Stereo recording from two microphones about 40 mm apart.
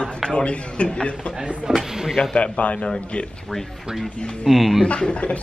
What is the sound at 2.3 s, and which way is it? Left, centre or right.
Speech, left.